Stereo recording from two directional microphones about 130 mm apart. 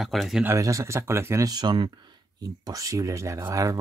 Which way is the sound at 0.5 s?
25° right (ahead or behind).